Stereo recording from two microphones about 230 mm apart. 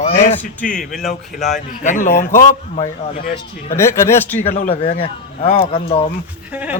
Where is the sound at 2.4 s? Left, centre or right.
Left.